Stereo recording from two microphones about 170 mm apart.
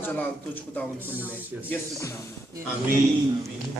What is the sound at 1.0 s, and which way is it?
Speech, 10° right (ahead or behind).